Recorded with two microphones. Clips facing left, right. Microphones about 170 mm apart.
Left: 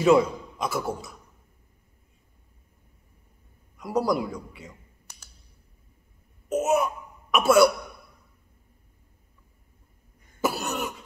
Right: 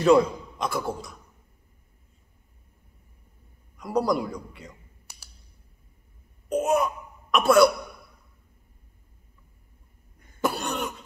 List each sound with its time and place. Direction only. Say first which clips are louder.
0.0 s a man's voice: right 1 dB; 5° left (ahead or behind)
3.7 s a man's voice: even; centre (ahead or behind)
5.1 s computer keyboard: even; 10° right (ahead or behind)
6.5 s a child's voice: even; 5° left (ahead or behind)
10.4 s cough: even; 5° left (ahead or behind)